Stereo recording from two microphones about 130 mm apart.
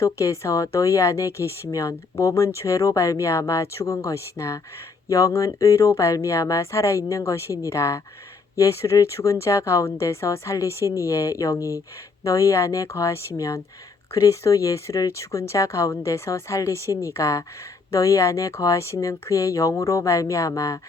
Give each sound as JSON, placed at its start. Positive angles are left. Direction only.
{"t": 0.0, "sound": "speech", "side_deg": 25}